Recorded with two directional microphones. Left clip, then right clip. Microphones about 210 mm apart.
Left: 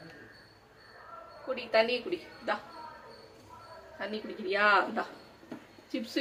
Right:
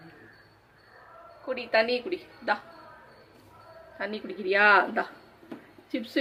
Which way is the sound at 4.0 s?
20° right (ahead or behind).